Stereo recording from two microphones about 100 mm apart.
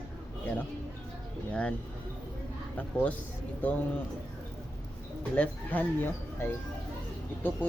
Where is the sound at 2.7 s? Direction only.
15° left (ahead or behind).